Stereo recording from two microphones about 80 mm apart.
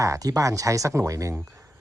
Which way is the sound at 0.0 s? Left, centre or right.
Right.